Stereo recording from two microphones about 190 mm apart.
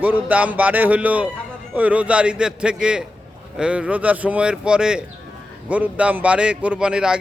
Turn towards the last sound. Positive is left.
turn(degrees=-5)  # may be behind; listen again after turning